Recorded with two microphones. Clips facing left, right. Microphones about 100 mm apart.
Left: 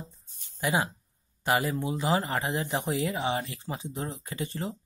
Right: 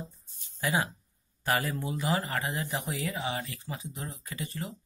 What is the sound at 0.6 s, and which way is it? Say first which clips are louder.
Speech: left 2 dB; 20° left (ahead or behind).